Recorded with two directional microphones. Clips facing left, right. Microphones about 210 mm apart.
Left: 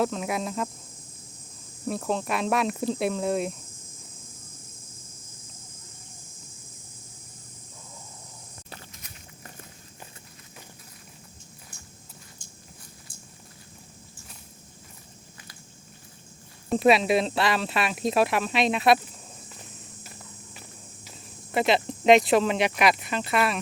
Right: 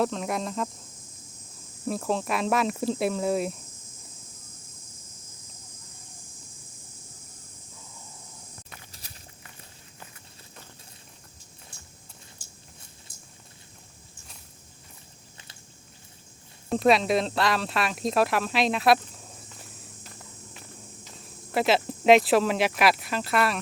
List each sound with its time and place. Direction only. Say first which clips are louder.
0.0 s speech: even; centre (ahead or behind)
1.9 s speech: even; centre (ahead or behind)
8.9 s walk: left 2 dB; 30° right (ahead or behind)
16.6 s speech: left 1 dB; 5° left (ahead or behind)
20.5 s walk: right 1 dB; 5° left (ahead or behind)
21.5 s speech: even; centre (ahead or behind)